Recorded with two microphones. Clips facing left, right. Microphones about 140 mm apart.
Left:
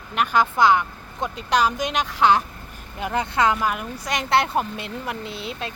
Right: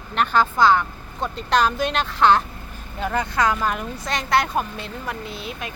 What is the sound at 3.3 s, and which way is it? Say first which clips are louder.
Speech: left 2 dB; 25° left (ahead or behind).